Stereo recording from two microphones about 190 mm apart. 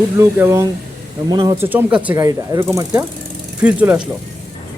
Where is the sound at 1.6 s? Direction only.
10° right (ahead or behind).